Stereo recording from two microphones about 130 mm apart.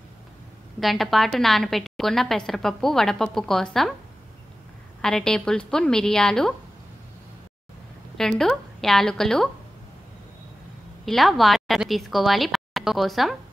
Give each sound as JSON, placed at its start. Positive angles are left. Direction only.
{"t": 0.7, "sound": "a woman's voice", "side_deg": 0}
{"t": 5.0, "sound": "a woman's voice", "side_deg": 5}
{"t": 8.2, "sound": "a woman's voice", "side_deg": 5}
{"t": 11.1, "sound": "a woman's voice", "side_deg": 0}